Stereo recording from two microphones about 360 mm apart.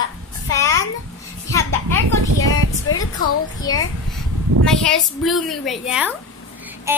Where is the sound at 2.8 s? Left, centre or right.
Left.